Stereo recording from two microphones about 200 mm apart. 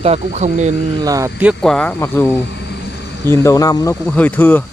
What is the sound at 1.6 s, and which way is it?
Speech, 5° left (ahead or behind).